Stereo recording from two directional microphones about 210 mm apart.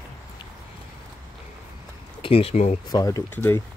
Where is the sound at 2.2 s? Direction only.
25° left (ahead or behind).